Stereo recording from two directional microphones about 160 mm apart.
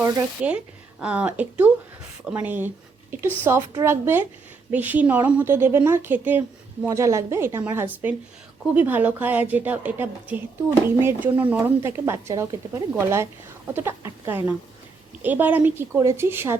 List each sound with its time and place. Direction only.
0.4 s a woman's voice: 5° right (ahead or behind)